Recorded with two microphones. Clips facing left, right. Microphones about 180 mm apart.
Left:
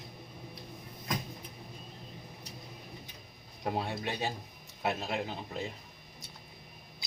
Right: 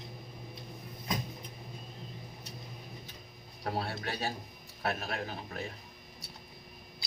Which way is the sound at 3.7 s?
15° left (ahead or behind).